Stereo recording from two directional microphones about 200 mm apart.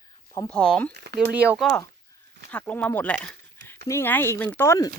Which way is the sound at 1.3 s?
5° right (ahead or behind).